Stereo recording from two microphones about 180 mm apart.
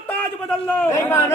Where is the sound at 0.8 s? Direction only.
15° left (ahead or behind).